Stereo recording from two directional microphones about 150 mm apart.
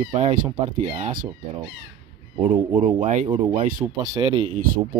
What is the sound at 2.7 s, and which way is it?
Speech, 45° right (ahead or behind).